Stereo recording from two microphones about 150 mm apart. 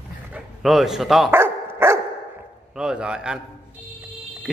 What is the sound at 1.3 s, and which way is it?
Dog, 15° right (ahead or behind).